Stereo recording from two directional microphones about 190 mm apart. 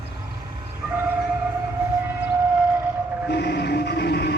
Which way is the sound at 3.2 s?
60° left (ahead or behind).